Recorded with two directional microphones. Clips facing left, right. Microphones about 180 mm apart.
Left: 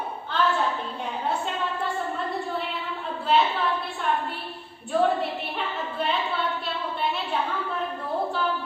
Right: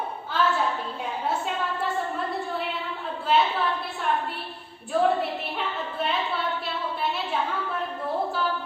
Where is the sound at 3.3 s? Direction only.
Centre (ahead or behind).